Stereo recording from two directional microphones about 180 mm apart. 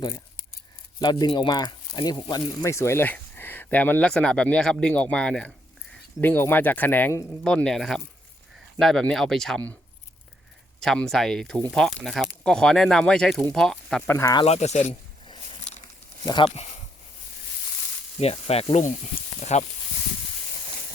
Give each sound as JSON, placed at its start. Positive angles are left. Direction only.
{"t": 1.2, "sound": "speech", "side_deg": 25}
{"t": 10.8, "sound": "speech", "side_deg": 5}
{"t": 14.2, "sound": "speech", "side_deg": 20}
{"t": 14.4, "sound": "snake", "side_deg": 35}
{"t": 16.2, "sound": "speech", "side_deg": 25}
{"t": 18.2, "sound": "snake", "side_deg": 35}